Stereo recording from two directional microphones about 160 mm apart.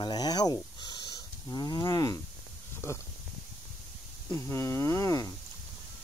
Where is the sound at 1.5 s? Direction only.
25° left (ahead or behind).